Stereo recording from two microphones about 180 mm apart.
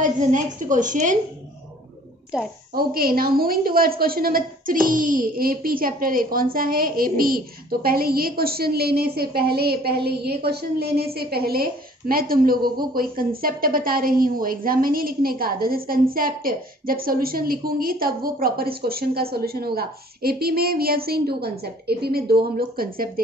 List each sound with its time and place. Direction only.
0.0 s a woman's voice: 45° right (ahead or behind)
2.3 s a woman's voice: 5° right (ahead or behind)
2.7 s a woman's voice: 55° right (ahead or behind)